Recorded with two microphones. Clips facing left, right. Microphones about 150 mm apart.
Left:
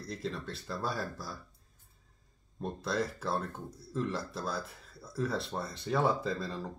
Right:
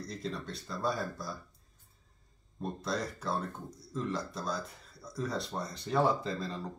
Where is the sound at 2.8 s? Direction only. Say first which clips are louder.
Left 3 dB; 5° left (ahead or behind).